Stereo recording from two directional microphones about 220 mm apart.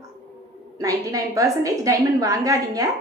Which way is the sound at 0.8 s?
15° right (ahead or behind).